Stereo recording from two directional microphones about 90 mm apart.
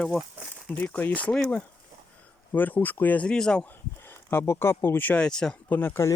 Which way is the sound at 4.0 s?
25° left (ahead or behind).